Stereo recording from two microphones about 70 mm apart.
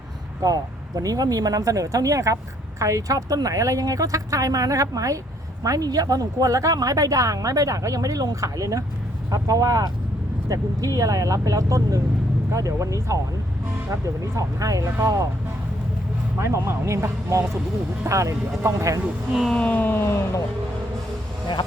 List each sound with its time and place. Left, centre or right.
0.4 s speech: right
16.4 s speech: right
19.3 s speech: centre
19.5 s a sound: left
20.0 s speech: left